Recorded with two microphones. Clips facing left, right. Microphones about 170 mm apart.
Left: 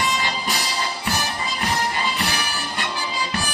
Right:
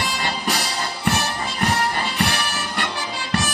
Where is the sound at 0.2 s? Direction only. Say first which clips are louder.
Right 1 dB; 60° right (ahead or behind).